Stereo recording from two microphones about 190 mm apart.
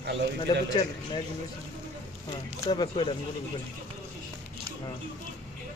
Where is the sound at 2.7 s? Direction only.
25° left (ahead or behind).